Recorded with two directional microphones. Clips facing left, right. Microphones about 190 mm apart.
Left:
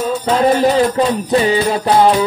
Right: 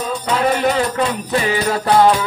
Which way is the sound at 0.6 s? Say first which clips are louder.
Left 5 dB; 30° left (ahead or behind).